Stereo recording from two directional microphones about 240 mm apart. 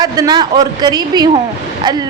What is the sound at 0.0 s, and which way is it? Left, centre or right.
A woman's voice, centre.